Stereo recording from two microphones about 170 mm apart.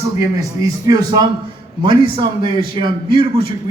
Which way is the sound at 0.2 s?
20° right (ahead or behind).